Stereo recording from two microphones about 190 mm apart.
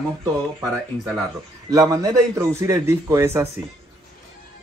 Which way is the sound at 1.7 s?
20° right (ahead or behind).